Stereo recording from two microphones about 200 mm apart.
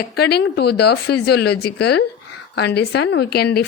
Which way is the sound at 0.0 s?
55° left (ahead or behind).